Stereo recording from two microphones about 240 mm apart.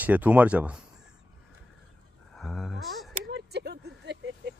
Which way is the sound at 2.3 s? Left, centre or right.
Centre.